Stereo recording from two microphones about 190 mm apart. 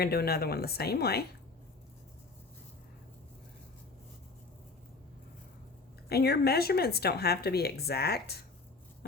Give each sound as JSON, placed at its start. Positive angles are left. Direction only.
{"t": 0.0, "sound": "speech", "side_deg": 55}
{"t": 6.1, "sound": "speech", "side_deg": 55}